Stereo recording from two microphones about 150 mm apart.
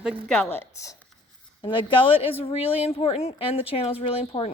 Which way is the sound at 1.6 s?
30° left (ahead or behind).